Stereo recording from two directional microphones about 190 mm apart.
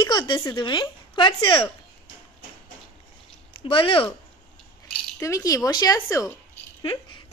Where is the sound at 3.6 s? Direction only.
30° left (ahead or behind).